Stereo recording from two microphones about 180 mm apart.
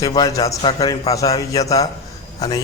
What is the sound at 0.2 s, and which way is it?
A man's voice, 20° left (ahead or behind).